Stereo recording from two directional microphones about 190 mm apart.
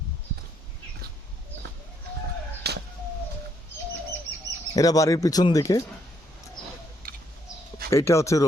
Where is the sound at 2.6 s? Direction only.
60° right (ahead or behind).